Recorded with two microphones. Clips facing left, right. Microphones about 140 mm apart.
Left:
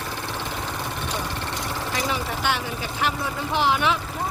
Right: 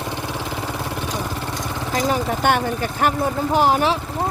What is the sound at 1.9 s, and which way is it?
Speech, 45° right (ahead or behind).